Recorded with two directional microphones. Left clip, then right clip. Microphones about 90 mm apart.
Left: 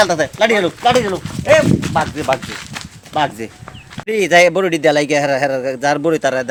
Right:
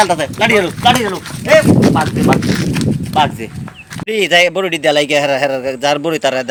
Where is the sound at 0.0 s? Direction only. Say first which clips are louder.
Right 1 dB; 20° left (ahead or behind).